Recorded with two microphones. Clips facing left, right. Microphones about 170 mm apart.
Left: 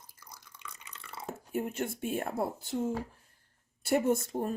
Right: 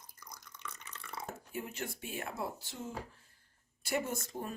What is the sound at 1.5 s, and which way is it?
Speech, 50° left (ahead or behind).